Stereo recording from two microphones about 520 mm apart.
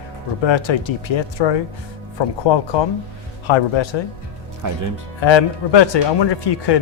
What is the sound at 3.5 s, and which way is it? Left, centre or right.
Speech, left.